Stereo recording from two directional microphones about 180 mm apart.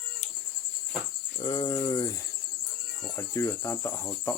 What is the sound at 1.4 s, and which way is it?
Cricket, 25° left (ahead or behind).